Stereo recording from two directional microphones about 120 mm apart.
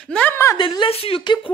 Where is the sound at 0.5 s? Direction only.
40° left (ahead or behind).